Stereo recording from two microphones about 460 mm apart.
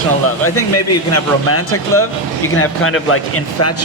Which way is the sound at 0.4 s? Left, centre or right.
Left.